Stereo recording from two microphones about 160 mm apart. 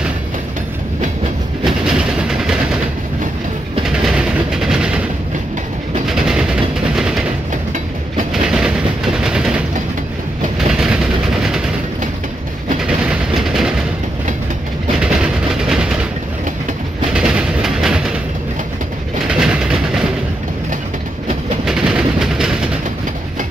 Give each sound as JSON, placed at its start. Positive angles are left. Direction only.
{"t": 1.6, "sound": "train", "side_deg": -5}
{"t": 3.8, "sound": "train", "side_deg": -5}
{"t": 6.0, "sound": "train", "side_deg": -5}
{"t": 8.3, "sound": "train", "side_deg": -5}
{"t": 10.7, "sound": "vehicle", "side_deg": 0}
{"t": 12.8, "sound": "train", "side_deg": -5}
{"t": 15.0, "sound": "train", "side_deg": -5}
{"t": 17.1, "sound": "music", "side_deg": -5}
{"t": 19.2, "sound": "vehicle", "side_deg": -5}
{"t": 21.6, "sound": "a sound", "side_deg": -5}